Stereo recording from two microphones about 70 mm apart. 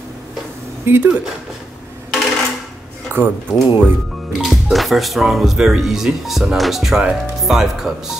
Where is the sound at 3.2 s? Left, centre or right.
Right.